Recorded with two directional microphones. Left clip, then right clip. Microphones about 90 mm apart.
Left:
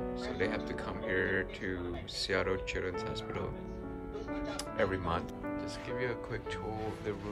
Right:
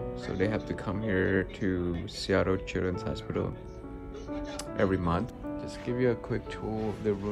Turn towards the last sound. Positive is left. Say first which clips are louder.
# right 7 dB
turn(degrees=20)  # may be behind; listen again after turning